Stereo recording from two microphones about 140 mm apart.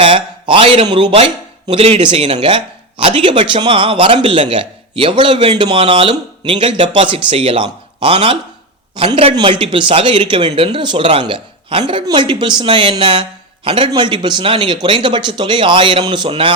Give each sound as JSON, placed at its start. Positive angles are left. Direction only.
{"t": 0.0, "sound": "speech", "side_deg": -40}